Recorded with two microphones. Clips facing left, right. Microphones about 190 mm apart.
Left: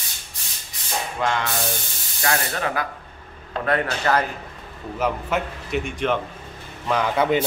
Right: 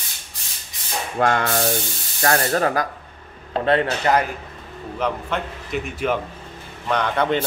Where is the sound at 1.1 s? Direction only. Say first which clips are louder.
Right 6 dB; 50° right (ahead or behind).